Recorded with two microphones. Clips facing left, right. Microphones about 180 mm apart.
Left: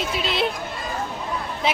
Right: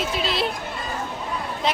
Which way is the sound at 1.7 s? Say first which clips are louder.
Left 1 dB; 5° left (ahead or behind).